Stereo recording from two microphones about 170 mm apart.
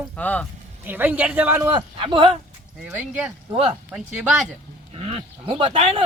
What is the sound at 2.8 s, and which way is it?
Speech, 10° right (ahead or behind).